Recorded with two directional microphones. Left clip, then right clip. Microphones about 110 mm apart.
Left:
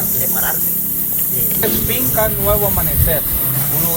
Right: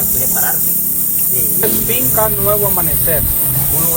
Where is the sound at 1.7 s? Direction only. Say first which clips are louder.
Right 1 dB; 25° right (ahead or behind).